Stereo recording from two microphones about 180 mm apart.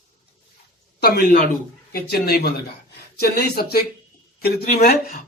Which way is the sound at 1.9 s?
60° left (ahead or behind).